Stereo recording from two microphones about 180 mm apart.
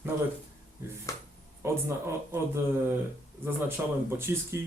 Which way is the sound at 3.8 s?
10° right (ahead or behind).